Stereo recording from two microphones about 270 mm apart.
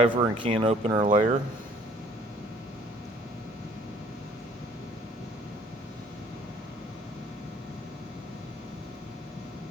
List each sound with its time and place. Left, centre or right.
0.0 s speech: centre